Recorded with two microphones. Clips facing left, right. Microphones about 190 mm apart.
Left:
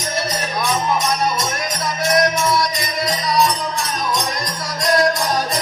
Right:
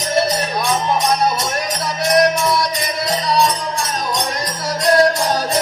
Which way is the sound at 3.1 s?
30° right (ahead or behind).